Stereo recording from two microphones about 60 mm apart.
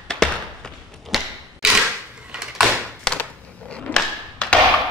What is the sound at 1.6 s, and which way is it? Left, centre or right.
Cap gun, centre.